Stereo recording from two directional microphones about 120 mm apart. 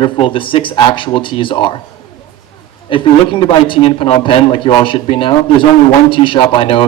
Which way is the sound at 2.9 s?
45° left (ahead or behind).